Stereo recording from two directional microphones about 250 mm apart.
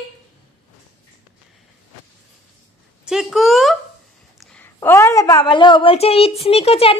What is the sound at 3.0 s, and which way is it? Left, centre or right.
A woman's voice, centre.